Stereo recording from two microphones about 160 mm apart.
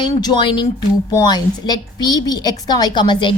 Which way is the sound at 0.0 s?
25° left (ahead or behind).